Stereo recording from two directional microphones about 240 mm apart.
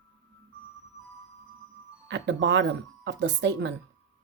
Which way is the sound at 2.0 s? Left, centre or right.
Right.